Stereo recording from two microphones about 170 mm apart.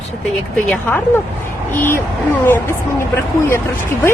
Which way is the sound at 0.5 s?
5° left (ahead or behind).